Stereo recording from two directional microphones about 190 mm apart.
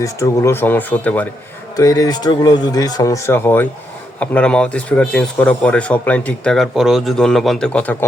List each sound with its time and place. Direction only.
0.0 s speech: 15° left (ahead or behind)